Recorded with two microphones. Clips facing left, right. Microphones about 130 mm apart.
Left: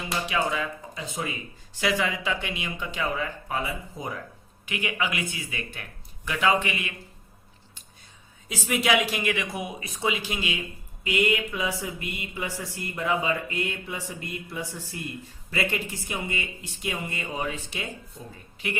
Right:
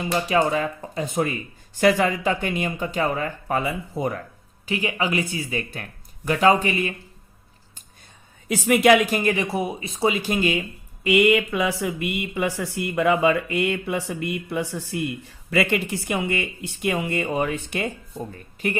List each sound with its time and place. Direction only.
0.3 s speech: 45° right (ahead or behind)
3.6 s speech: 70° right (ahead or behind)
4.6 s speech: 35° right (ahead or behind)
8.4 s speech: 60° right (ahead or behind); by 10.1 s 30° right (ahead or behind)
10.1 s speech: 45° right (ahead or behind)
11.0 s speech: 65° right (ahead or behind)
18.6 s speech: 45° right (ahead or behind)